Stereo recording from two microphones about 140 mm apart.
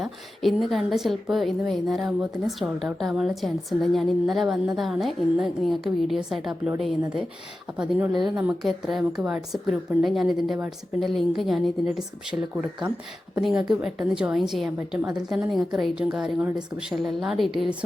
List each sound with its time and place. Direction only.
0.0 s a woman's voice: centre (ahead or behind)